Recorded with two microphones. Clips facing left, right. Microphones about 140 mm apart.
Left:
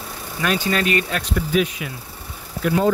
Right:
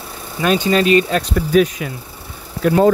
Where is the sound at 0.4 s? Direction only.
25° right (ahead or behind).